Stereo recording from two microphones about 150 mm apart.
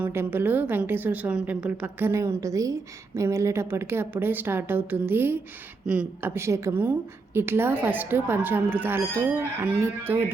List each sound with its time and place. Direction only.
0.0 s speech: 15° right (ahead or behind)